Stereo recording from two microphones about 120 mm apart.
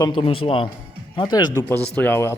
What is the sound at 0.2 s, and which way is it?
Speech, 50° left (ahead or behind).